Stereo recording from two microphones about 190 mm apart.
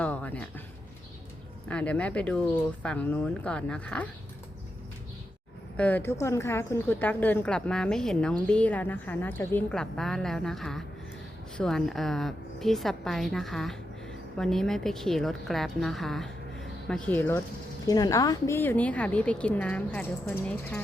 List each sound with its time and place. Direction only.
0.0 s a sound: 5° left (ahead or behind)
1.6 s a woman's voice: 5° left (ahead or behind)
5.7 s a woman's voice: 10° left (ahead or behind)
17.8 s a woman's voice: 20° left (ahead or behind)